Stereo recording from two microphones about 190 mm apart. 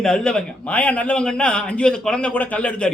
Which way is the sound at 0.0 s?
5° left (ahead or behind).